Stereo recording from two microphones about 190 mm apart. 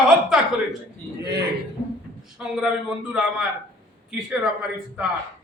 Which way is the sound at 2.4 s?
5° right (ahead or behind).